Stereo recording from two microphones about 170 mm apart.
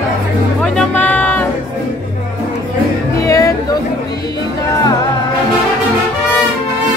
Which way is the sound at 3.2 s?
20° left (ahead or behind).